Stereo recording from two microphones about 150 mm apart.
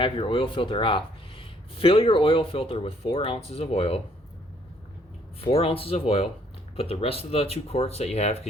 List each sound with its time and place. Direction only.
0.0 s speech: 35° left (ahead or behind)
5.4 s speech: 40° left (ahead or behind)